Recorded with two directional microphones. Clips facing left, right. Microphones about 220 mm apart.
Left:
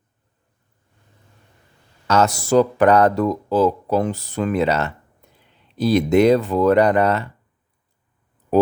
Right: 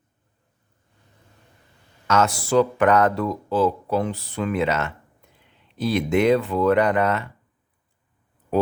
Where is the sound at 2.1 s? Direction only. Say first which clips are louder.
Left 3 dB; 40° left (ahead or behind).